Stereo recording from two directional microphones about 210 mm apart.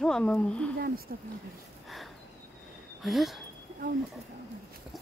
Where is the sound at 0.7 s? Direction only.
45° right (ahead or behind).